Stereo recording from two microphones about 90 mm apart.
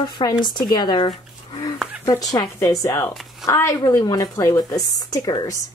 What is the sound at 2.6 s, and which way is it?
Speech, 35° left (ahead or behind).